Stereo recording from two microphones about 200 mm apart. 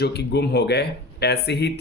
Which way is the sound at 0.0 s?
55° left (ahead or behind).